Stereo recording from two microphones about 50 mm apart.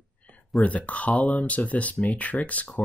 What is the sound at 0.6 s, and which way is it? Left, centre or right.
Speech, left.